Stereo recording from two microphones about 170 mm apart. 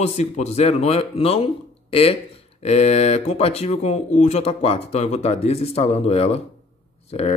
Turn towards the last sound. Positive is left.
turn(degrees=40)  # may be behind; listen again after turning